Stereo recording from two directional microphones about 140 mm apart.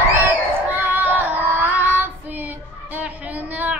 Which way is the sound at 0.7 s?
15° right (ahead or behind).